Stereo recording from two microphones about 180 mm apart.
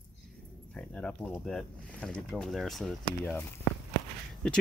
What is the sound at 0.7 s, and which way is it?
Speech, 5° left (ahead or behind).